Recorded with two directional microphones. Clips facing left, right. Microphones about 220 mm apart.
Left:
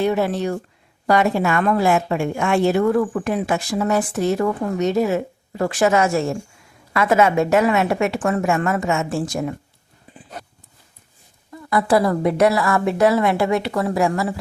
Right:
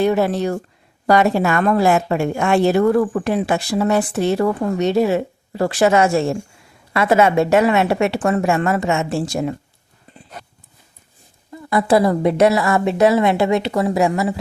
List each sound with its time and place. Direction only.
0.0 s a woman's voice: 40° right (ahead or behind); by 9.6 s 25° right (ahead or behind)
11.5 s a woman's voice: 25° right (ahead or behind)